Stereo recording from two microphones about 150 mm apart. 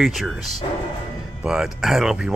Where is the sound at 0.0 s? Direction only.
Centre (ahead or behind).